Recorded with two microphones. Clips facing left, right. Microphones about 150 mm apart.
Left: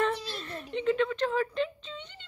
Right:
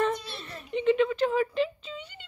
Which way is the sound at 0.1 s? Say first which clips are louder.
Even; 5° right (ahead or behind).